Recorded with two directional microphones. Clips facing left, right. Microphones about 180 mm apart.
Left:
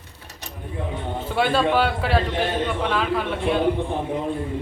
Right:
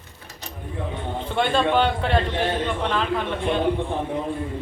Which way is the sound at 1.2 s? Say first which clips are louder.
Left 1 dB; 5° left (ahead or behind).